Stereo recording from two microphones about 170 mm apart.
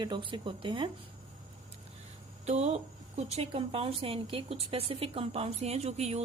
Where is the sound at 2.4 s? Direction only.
40° right (ahead or behind).